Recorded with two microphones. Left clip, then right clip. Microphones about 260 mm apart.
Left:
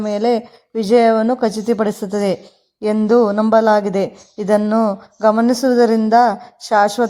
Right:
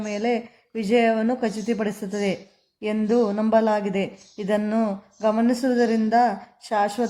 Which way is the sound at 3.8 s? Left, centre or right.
Left.